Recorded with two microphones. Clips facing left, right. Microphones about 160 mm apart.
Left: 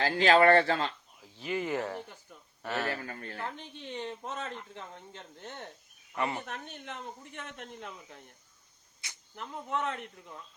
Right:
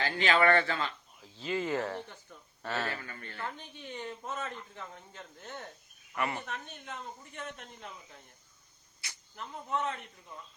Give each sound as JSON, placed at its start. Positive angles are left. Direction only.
{"t": 0.0, "sound": "speech", "side_deg": 35}
{"t": 1.2, "sound": "speech", "side_deg": 15}
{"t": 2.9, "sound": "speech", "side_deg": 40}
{"t": 3.4, "sound": "a man's voice", "side_deg": 25}
{"t": 6.8, "sound": "speech", "side_deg": 65}
{"t": 9.3, "sound": "speech", "side_deg": 70}